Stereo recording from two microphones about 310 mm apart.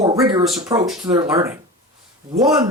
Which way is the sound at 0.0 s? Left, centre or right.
Centre.